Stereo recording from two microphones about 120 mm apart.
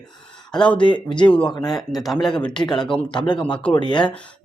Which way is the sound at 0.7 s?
40° left (ahead or behind).